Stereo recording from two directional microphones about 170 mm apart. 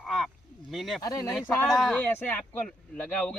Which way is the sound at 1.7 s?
Centre (ahead or behind).